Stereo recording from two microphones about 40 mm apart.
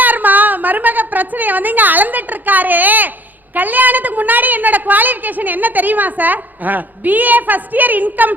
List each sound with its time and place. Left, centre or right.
0.0 s a woman's voice: right